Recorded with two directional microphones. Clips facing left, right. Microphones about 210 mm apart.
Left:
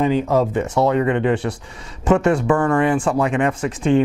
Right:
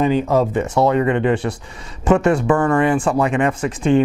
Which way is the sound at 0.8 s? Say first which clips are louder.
Right 1 dB; 15° right (ahead or behind).